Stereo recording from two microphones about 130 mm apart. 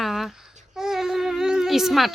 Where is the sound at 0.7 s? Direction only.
5° right (ahead or behind).